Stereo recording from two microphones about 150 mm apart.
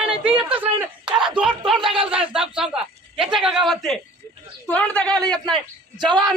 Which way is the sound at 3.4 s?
Centre (ahead or behind).